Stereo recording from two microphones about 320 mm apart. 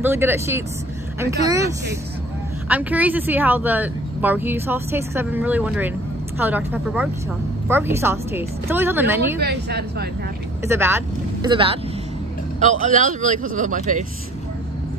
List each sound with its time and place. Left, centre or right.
0.0 s a woman's voice: centre
2.7 s a woman's voice: centre
9.4 s a woman's voice: right
10.6 s a woman's voice: centre; by 14.0 s right